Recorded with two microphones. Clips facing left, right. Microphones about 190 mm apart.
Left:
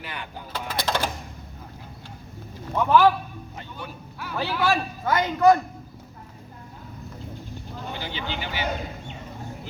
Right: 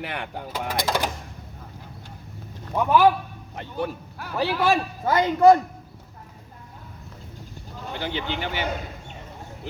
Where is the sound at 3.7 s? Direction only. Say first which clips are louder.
Right 14 dB; 50° right (ahead or behind).